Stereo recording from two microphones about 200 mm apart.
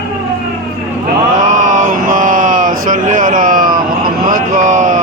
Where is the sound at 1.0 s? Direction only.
40° right (ahead or behind).